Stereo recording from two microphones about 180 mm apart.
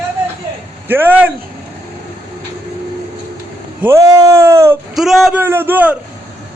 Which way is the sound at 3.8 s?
15° right (ahead or behind).